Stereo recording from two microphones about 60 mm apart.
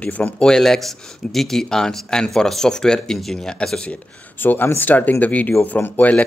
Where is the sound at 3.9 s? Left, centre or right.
Left.